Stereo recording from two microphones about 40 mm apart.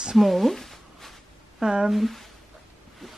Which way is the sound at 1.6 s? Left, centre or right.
Centre.